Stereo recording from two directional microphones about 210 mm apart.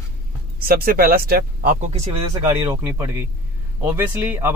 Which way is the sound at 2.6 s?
10° right (ahead or behind).